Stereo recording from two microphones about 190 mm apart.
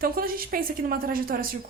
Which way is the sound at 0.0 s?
50° right (ahead or behind).